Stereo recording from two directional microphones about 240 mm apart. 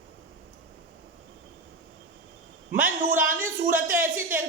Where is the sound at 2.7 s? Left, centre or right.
Centre.